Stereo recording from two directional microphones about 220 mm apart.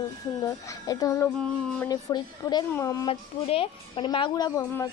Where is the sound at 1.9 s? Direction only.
15° left (ahead or behind).